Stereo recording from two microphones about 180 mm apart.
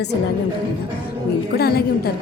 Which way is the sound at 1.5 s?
60° left (ahead or behind).